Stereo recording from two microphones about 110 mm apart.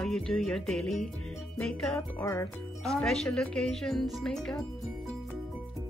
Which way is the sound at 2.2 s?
25° left (ahead or behind).